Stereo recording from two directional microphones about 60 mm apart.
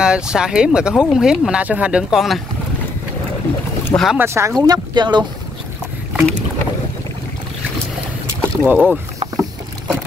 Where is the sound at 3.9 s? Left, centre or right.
Left.